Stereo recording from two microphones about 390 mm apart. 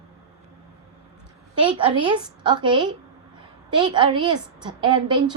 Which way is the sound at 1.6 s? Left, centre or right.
Centre.